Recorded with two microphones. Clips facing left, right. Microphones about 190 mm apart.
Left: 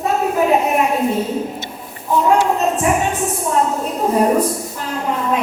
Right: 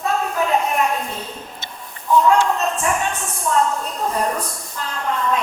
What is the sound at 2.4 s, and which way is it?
A woman's voice, 20° left (ahead or behind).